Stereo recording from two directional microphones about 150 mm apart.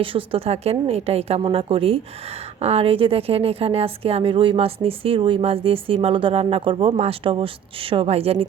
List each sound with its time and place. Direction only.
0.0 s a woman's voice: 35° right (ahead or behind)